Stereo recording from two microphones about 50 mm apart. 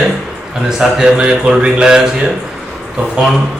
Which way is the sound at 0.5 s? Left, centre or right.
Centre.